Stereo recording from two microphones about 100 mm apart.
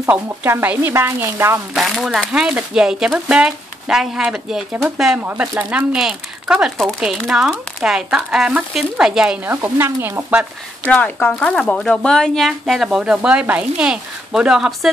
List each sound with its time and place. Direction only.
0.0 s speech: 20° right (ahead or behind)
1.7 s speech: centre (ahead or behind)
5.2 s speech: 15° right (ahead or behind)
9.5 s speech: 25° right (ahead or behind)
10.9 s speech: 15° left (ahead or behind); by 14.9 s 5° right (ahead or behind)